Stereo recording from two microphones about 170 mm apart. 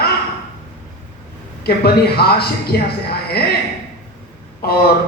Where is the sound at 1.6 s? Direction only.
70° left (ahead or behind).